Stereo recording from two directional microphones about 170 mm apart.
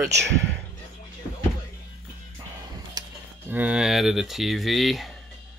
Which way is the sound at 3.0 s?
25° right (ahead or behind).